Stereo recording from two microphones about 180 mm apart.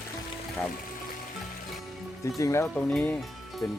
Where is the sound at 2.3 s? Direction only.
15° left (ahead or behind).